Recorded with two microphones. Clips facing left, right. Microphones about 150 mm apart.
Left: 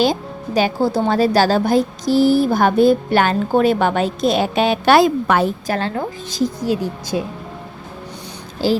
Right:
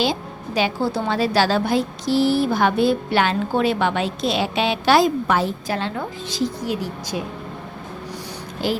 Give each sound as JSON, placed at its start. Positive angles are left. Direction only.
{"t": 0.0, "sound": "speech", "side_deg": 45}
{"t": 4.9, "sound": "a woman's voice", "side_deg": 65}
{"t": 5.6, "sound": "speech", "side_deg": 50}
{"t": 8.6, "sound": "speech", "side_deg": 35}